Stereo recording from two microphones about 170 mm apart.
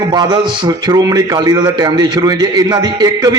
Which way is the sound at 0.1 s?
25° right (ahead or behind).